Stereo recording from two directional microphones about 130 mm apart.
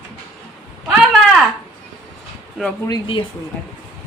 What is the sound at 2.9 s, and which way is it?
Speech, 40° left (ahead or behind).